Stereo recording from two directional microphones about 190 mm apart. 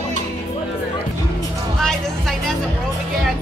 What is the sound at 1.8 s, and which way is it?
Music, centre (ahead or behind).